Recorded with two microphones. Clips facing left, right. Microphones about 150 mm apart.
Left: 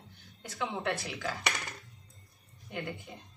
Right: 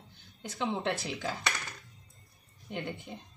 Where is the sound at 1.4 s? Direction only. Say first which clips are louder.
Even; 20° left (ahead or behind).